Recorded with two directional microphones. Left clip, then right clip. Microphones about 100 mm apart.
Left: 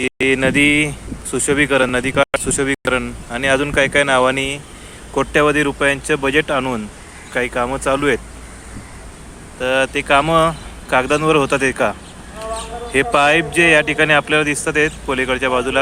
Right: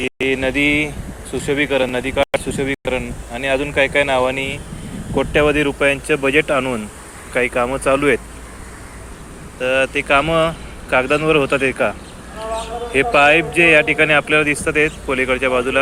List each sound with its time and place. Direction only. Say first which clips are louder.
0.0 s speech: left 3 dB; 65° left (ahead or behind)
5.1 s speech: left 1 dB; 35° left (ahead or behind)
7.3 s speech: right 1 dB; 15° left (ahead or behind)
9.6 s a man's voice: even; 45° left (ahead or behind); by 15.8 s 30° left (ahead or behind)